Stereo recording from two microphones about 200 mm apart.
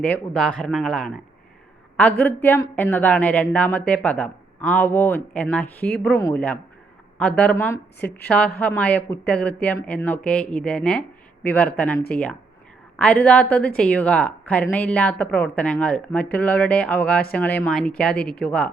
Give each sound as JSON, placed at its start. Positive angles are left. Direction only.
{"t": 0.0, "sound": "a woman's voice", "side_deg": 5}
{"t": 7.2, "sound": "a woman's voice", "side_deg": 5}